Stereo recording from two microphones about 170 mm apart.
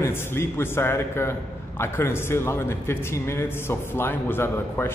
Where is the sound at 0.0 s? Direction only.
15° left (ahead or behind).